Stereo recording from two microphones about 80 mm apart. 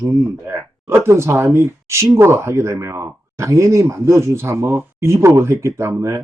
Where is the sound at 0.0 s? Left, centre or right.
Right.